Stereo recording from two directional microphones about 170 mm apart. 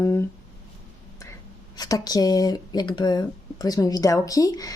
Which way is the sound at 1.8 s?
20° left (ahead or behind).